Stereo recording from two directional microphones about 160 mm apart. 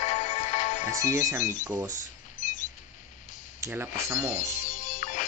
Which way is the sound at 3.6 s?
15° right (ahead or behind).